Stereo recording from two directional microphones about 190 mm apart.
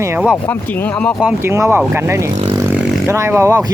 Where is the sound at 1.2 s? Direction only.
15° right (ahead or behind).